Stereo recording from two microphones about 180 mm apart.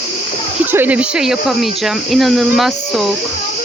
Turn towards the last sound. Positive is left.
turn(degrees=0)  # may be behind; listen again after turning